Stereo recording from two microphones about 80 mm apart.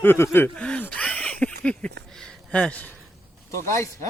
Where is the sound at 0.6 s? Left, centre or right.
Centre.